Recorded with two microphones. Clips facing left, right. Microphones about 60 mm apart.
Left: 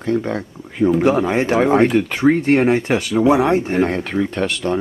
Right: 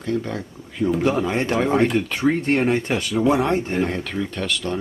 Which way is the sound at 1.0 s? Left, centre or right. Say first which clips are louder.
Left 5 dB; centre.